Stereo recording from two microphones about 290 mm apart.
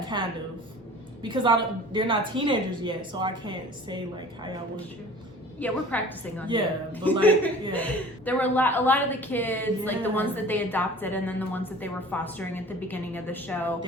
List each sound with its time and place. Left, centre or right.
0.0 s a sound: centre
1.2 s a woman's voice: centre
5.5 s a woman's voice: centre